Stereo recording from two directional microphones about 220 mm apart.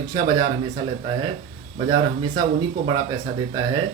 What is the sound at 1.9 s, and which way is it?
Speech, 20° right (ahead or behind).